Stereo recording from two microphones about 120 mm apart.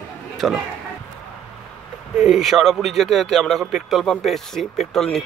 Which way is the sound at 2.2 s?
Centre (ahead or behind).